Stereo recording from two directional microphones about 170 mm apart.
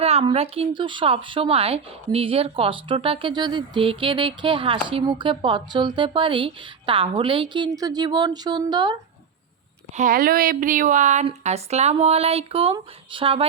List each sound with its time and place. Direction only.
0.0 s a woman's voice: 35° right (ahead or behind)
9.9 s a woman's voice: 50° right (ahead or behind); by 13.5 s 35° right (ahead or behind)